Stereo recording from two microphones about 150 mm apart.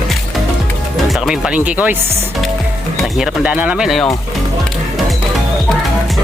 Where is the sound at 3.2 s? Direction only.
5° right (ahead or behind).